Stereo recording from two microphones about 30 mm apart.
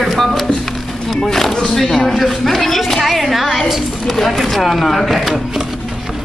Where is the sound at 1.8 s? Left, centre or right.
Centre.